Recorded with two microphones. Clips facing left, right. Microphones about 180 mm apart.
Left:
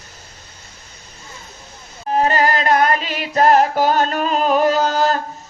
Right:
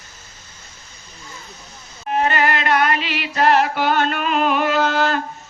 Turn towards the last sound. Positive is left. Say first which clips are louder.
# left 1 dB
turn(degrees=40)  # may be behind; listen again after turning